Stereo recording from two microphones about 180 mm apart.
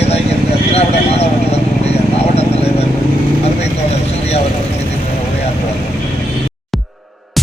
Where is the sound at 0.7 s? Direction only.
35° left (ahead or behind).